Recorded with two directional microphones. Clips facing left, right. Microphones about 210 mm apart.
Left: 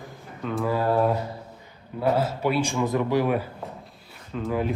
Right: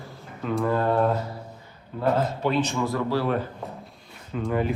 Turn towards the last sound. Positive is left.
turn(degrees=0)  # may be behind; listen again after turning